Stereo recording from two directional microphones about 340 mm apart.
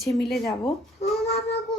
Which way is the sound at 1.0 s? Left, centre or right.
Centre.